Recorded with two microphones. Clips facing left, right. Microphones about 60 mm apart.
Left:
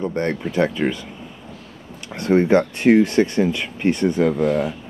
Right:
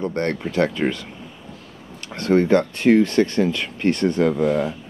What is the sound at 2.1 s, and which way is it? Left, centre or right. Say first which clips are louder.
Speech: left 1 dB; centre.